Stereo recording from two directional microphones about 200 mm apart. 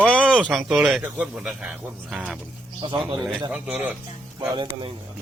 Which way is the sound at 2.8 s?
25° right (ahead or behind).